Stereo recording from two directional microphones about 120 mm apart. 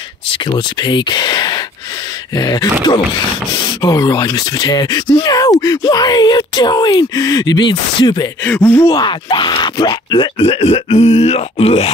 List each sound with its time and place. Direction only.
0.5 s speech: 40° left (ahead or behind)
3.8 s speech: 30° left (ahead or behind)
8.5 s speech: 15° left (ahead or behind)
8.8 s speech: 35° left (ahead or behind); by 11.9 s 55° left (ahead or behind)